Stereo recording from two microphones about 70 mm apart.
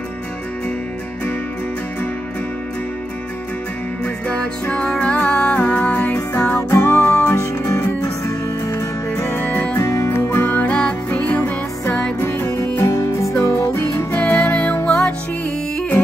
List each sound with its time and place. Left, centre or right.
4.0 s music: centre; by 7.2 s left
7.2 s music: left
9.3 s music: left
9.8 s music: left
10.0 s music: left
12.2 s music: left
12.8 s music: left
14.1 s music: left